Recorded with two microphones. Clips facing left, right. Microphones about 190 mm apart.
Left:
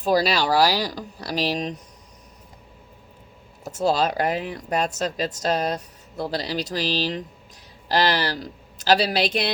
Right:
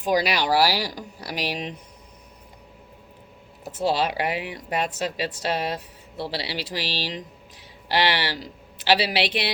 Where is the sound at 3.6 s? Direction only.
40° left (ahead or behind).